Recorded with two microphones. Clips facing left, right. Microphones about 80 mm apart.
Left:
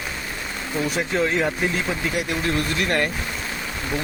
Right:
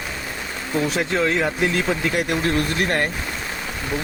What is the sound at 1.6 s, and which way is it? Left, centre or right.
Speech, right.